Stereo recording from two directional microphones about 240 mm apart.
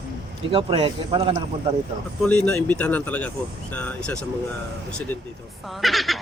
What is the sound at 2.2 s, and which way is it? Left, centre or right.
Speech, centre.